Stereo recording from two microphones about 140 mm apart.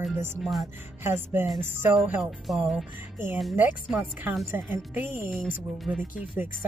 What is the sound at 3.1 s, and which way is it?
Speech, 15° right (ahead or behind).